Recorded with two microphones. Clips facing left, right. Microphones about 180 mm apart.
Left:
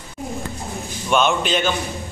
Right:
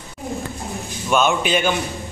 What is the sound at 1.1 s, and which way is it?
Speech, 5° right (ahead or behind).